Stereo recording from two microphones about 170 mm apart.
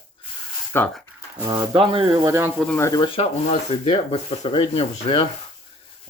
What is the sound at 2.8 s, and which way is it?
Speech, 20° left (ahead or behind).